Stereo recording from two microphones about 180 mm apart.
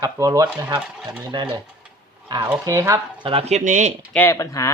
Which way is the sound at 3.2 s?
35° right (ahead or behind).